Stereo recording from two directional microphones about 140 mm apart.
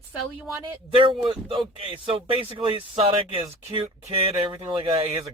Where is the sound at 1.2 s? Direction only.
35° right (ahead or behind).